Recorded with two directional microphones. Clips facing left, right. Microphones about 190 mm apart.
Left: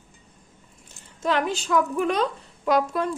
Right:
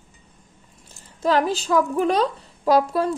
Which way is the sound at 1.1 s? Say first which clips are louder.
Right 4 dB; 35° right (ahead or behind).